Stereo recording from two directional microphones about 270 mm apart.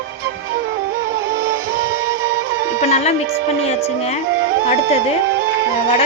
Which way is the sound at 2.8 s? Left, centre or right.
Left.